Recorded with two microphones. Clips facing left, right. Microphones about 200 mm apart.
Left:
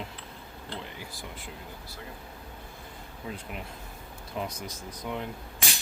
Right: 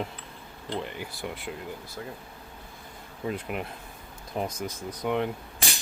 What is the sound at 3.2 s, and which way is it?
Speech, 60° right (ahead or behind).